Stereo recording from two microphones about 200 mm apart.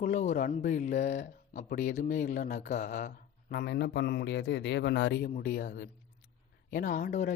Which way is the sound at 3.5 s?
55° left (ahead or behind).